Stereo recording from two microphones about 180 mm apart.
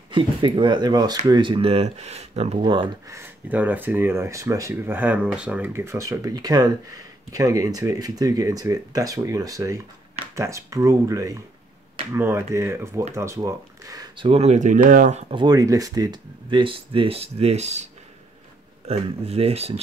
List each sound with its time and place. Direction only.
0.1 s speech: 25° right (ahead or behind)
15.4 s speech: 20° right (ahead or behind); by 17.8 s 40° right (ahead or behind)
18.9 s speech: 35° right (ahead or behind)